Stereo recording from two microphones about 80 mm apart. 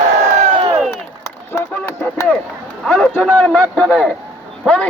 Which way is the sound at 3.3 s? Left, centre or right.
Centre.